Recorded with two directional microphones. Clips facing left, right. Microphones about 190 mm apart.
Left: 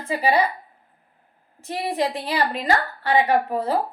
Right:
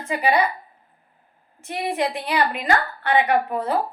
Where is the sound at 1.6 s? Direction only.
35° left (ahead or behind).